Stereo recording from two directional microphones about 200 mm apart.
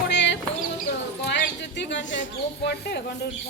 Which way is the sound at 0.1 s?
60° left (ahead or behind).